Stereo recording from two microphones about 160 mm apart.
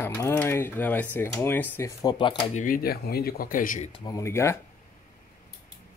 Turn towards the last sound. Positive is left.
turn(degrees=15)  # may be behind; listen again after turning